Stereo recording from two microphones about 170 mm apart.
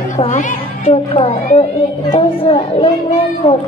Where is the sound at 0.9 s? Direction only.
35° left (ahead or behind).